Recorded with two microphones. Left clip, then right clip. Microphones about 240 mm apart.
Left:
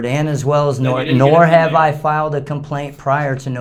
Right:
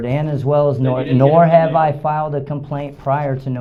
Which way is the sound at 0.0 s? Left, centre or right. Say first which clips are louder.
Left 2 dB; left.